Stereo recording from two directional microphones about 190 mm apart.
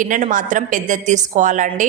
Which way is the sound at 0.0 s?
45° right (ahead or behind).